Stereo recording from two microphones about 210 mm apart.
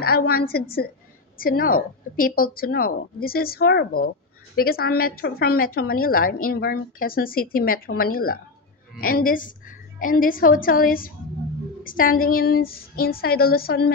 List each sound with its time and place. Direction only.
0.3 s a woman's voice: 45° left (ahead or behind)